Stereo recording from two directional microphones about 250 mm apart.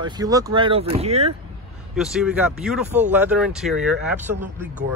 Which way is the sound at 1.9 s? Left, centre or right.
Centre.